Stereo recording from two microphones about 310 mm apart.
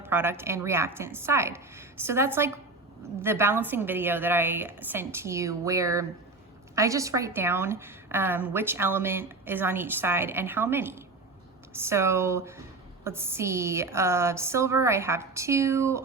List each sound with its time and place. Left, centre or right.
0.0 s a woman's voice: centre